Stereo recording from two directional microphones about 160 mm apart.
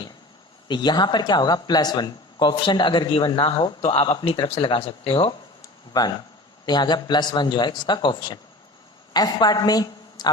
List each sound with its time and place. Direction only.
0.7 s speech: 25° left (ahead or behind)
5.6 s a sound: 25° left (ahead or behind)
6.7 s a woman's voice: 25° left (ahead or behind)